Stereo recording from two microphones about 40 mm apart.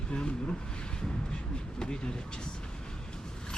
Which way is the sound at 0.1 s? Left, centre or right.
Left.